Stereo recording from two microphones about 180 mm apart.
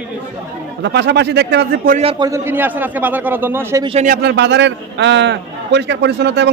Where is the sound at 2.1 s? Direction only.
20° right (ahead or behind).